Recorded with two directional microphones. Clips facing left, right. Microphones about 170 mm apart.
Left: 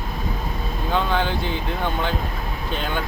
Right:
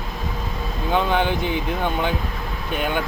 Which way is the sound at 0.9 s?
15° right (ahead or behind).